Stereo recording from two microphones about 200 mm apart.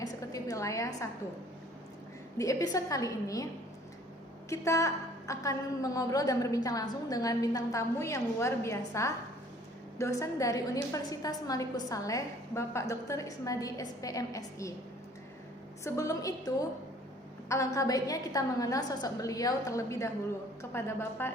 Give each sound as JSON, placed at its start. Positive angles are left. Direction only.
{"t": 0.0, "sound": "a sound", "side_deg": 15}
{"t": 2.4, "sound": "a woman's voice", "side_deg": 15}
{"t": 4.4, "sound": "a woman's voice", "side_deg": 15}
{"t": 15.8, "sound": "a woman's voice", "side_deg": 15}